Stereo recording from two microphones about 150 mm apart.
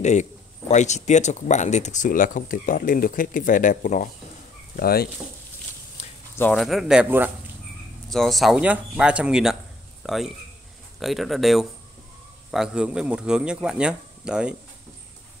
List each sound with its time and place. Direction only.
0.0 s speech: 50° left (ahead or behind)
4.7 s speech: 90° left
6.5 s speech: centre (ahead or behind)
8.1 s speech: centre (ahead or behind)